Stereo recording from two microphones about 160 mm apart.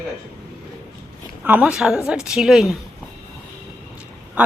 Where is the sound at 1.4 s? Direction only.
10° right (ahead or behind).